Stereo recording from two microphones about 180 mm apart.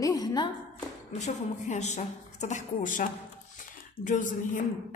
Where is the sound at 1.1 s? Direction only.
40° left (ahead or behind).